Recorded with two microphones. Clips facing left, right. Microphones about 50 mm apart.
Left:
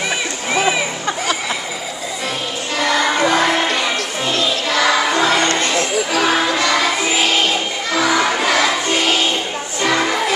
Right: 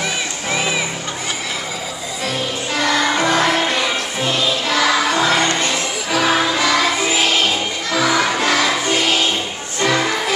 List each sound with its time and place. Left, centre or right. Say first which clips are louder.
2.8 s music: left 1 dB; centre
5.4 s music: left 1 dB; centre
6.1 s music: right 1 dB; centre